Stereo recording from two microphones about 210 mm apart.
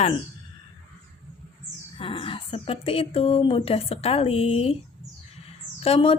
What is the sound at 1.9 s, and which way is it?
A woman's voice, 25° left (ahead or behind).